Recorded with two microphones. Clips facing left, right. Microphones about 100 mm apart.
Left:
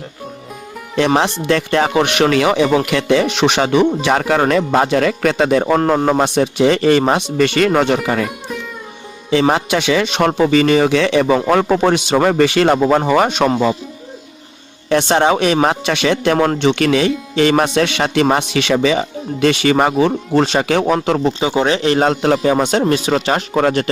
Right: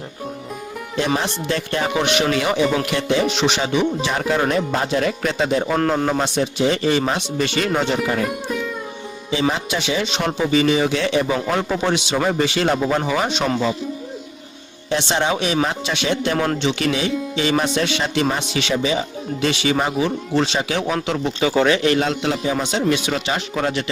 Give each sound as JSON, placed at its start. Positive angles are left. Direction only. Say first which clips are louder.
{"t": 0.9, "sound": "speech", "louder": "left 7 dB", "side_deg": 75}
{"t": 6.0, "sound": "a man's voice", "louder": "left 6 dB", "side_deg": 40}
{"t": 6.2, "sound": "speech", "louder": "left 6 dB", "side_deg": 60}
{"t": 8.3, "sound": "music", "louder": "right 2 dB", "side_deg": 0}
{"t": 9.3, "sound": "speech", "louder": "left 7 dB", "side_deg": 65}
{"t": 11.5, "sound": "speech", "louder": "left 7 dB", "side_deg": 55}
{"t": 14.8, "sound": "speech", "louder": "left 7 dB", "side_deg": 55}
{"t": 21.4, "sound": "speech", "louder": "right 2 dB", "side_deg": 25}
{"t": 21.9, "sound": "speech", "louder": "left 6 dB", "side_deg": 45}